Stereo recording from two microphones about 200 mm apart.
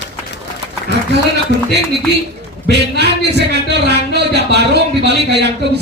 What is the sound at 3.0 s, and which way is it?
Speech, 55° right (ahead or behind).